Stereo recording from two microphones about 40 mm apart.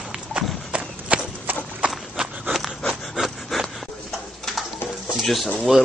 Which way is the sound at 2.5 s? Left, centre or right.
Centre.